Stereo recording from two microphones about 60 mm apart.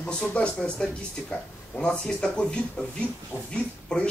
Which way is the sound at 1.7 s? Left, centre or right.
Centre.